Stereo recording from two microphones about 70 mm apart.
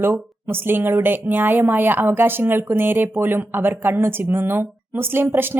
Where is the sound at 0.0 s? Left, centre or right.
Right.